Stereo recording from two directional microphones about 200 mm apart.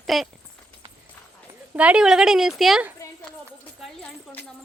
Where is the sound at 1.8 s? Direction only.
5° right (ahead or behind).